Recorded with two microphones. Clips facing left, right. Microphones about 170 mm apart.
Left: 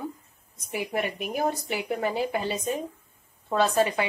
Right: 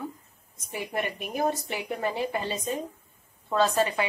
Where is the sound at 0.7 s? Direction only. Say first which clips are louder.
Left 2 dB; 10° left (ahead or behind).